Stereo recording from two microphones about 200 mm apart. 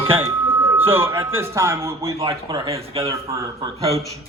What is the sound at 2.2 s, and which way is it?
Speech, 25° right (ahead or behind).